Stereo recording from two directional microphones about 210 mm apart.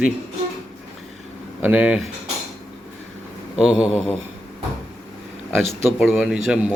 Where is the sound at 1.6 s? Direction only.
5° right (ahead or behind).